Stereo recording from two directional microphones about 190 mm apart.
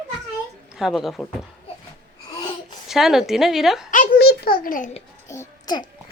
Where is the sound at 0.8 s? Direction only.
Centre (ahead or behind).